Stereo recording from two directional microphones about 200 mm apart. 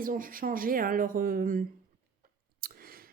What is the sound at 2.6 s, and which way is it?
Clicking, 50° right (ahead or behind).